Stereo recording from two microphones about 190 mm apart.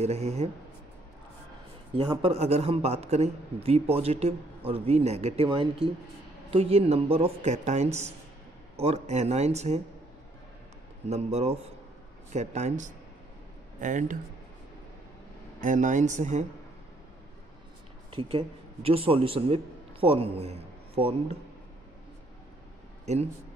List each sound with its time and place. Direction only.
0.0 s a man's voice: 35° right (ahead or behind)
2.0 s a man's voice: 30° right (ahead or behind)
11.1 s a man's voice: 35° right (ahead or behind)
15.6 s a man's voice: 40° right (ahead or behind)
18.1 s a man's voice: 30° right (ahead or behind)